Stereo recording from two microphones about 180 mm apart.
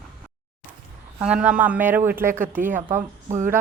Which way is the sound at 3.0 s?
40° right (ahead or behind).